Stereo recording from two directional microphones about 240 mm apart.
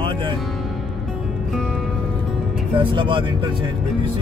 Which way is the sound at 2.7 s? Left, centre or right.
Centre.